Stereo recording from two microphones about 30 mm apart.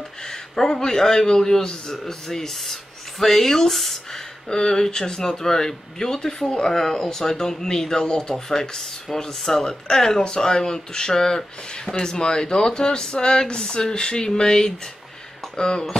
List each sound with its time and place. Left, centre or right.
0.2 s a man's voice: centre
4.1 s speech: left
9.7 s speech: left